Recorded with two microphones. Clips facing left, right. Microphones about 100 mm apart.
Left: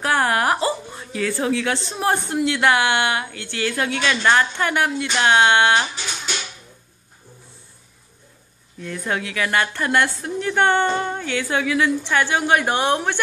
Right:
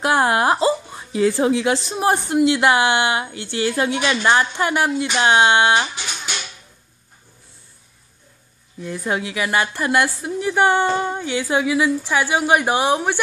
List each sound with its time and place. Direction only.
0.0 s a woman's voice: 20° right (ahead or behind)
8.7 s a woman's voice: 15° right (ahead or behind)